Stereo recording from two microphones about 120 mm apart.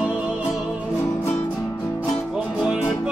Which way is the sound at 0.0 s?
10° right (ahead or behind).